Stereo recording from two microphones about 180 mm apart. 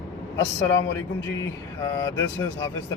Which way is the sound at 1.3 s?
20° left (ahead or behind).